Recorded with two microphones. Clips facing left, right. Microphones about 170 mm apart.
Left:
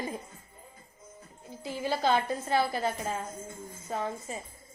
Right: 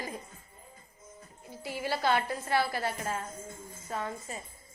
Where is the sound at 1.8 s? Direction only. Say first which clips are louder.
Left 2 dB; 20° left (ahead or behind).